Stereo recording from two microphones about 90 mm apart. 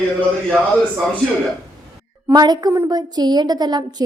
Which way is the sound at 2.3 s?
50° right (ahead or behind).